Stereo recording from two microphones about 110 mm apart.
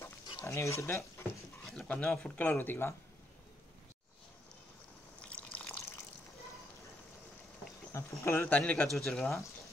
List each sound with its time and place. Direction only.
0.4 s speech: 25° left (ahead or behind)
1.6 s speech: 5° left (ahead or behind); by 2.9 s 20° left (ahead or behind)
5.2 s water: 10° left (ahead or behind)
7.9 s speech: 25° left (ahead or behind); by 9.3 s 5° left (ahead or behind)